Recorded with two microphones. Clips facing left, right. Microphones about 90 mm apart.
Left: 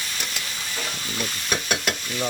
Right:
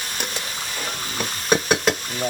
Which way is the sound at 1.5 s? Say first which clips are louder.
Right 8 dB; 45° right (ahead or behind).